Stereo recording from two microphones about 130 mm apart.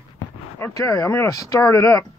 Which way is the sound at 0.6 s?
25° left (ahead or behind).